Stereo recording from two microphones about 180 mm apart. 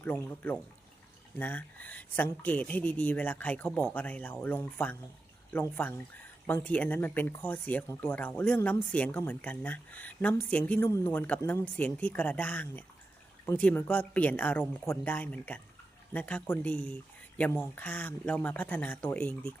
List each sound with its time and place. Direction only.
0.0 s speech: 10° left (ahead or behind)